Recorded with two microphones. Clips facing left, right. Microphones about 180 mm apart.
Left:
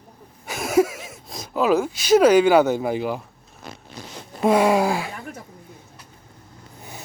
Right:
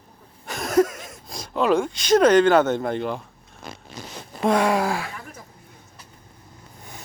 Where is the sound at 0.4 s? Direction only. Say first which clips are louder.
Left 1 dB; 5° left (ahead or behind).